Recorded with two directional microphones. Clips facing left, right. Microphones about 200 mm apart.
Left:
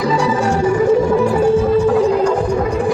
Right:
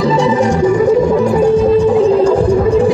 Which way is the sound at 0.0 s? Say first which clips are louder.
Right 4 dB; 20° right (ahead or behind).